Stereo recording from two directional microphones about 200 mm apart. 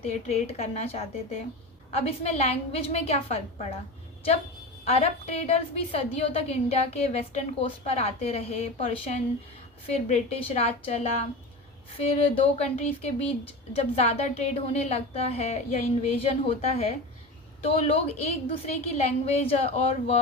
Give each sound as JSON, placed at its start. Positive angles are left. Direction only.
{"t": 0.0, "sound": "speech", "side_deg": 30}
{"t": 4.9, "sound": "speech", "side_deg": 30}